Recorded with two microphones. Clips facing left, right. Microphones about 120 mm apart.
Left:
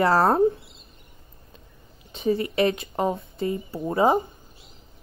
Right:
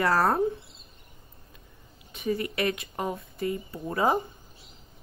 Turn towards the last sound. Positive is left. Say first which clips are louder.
# left 5 dB
turn(degrees=25)  # may be behind; listen again after turning